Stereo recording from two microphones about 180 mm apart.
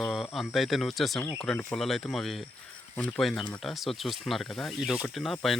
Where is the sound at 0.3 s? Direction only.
Centre (ahead or behind).